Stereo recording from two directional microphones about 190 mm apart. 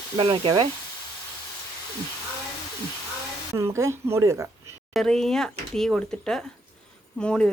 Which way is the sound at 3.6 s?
15° right (ahead or behind).